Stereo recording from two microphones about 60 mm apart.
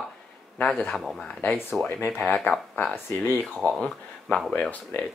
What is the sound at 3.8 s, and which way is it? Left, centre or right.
Speech, centre.